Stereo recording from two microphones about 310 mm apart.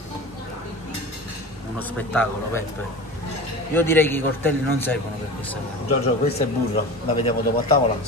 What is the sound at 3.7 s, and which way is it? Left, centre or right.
A man's voice, centre.